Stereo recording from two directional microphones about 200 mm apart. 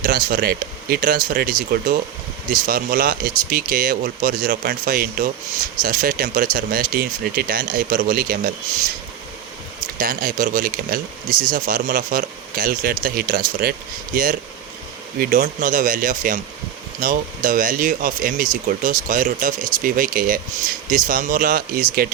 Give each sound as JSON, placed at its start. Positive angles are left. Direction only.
{"t": 0.0, "sound": "speech", "side_deg": -45}
{"t": 9.8, "sound": "speech", "side_deg": -45}